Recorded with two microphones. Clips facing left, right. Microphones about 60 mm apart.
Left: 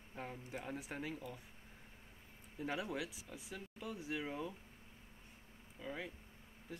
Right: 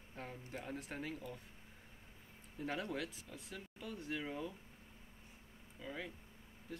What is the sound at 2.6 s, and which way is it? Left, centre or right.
Speech, centre.